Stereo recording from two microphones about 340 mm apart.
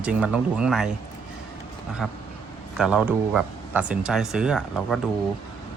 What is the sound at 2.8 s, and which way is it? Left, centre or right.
Speech, centre.